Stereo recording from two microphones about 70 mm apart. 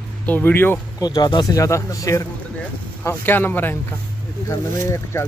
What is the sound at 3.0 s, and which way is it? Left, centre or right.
Speech, left.